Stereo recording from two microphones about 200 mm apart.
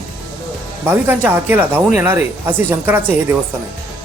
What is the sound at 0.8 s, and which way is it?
Speech, 10° right (ahead or behind).